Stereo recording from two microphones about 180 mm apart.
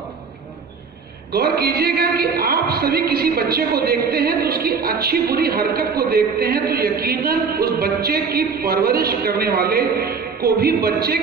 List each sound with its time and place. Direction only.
1.3 s a man's voice: 60° right (ahead or behind)